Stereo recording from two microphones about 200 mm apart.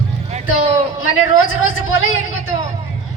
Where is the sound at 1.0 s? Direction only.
90° left.